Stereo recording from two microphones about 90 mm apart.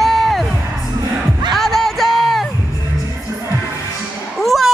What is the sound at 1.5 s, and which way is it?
Music, 5° left (ahead or behind).